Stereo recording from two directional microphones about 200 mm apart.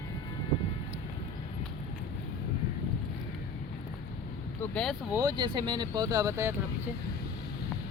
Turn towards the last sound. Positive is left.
turn(degrees=-15)  # may be behind; listen again after turning